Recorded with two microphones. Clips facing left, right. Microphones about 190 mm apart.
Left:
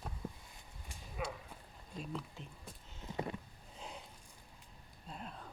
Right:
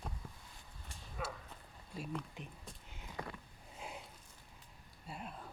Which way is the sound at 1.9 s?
5° right (ahead or behind).